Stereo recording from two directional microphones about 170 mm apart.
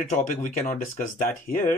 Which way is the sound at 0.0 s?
45° left (ahead or behind).